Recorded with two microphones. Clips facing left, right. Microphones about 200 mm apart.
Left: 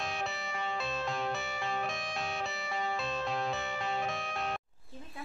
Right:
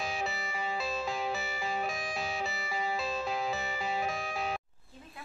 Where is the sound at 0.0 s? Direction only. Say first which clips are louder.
Right 2 dB; centre (ahead or behind).